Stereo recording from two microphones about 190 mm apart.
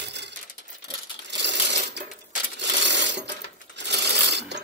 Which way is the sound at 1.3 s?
65° right (ahead or behind).